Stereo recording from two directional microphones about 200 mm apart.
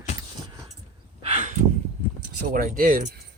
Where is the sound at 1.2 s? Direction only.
35° right (ahead or behind).